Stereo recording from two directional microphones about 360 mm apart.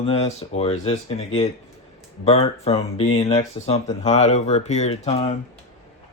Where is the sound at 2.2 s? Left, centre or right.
Centre.